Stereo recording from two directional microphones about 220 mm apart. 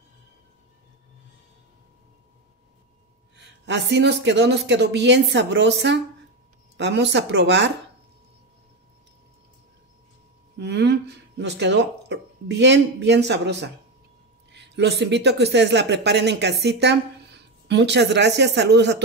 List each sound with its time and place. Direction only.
3.3 s speech: 55° right (ahead or behind)
10.6 s speech: 50° right (ahead or behind)